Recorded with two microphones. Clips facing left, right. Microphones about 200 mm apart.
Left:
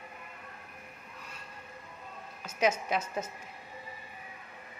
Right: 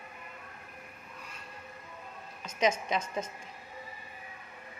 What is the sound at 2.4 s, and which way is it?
Speech, 5° left (ahead or behind).